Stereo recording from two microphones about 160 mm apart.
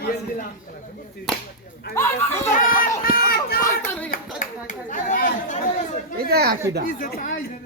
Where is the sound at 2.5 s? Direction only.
55° left (ahead or behind).